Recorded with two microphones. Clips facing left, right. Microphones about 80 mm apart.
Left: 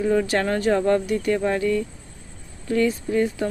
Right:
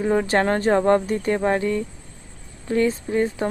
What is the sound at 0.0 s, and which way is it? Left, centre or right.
Speech, right.